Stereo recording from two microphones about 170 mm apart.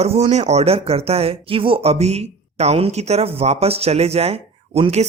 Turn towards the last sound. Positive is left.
turn(degrees=-40)  # may be behind; listen again after turning